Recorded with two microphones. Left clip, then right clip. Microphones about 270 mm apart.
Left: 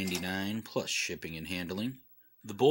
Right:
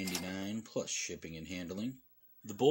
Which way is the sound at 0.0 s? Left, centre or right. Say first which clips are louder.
Left 4 dB; centre.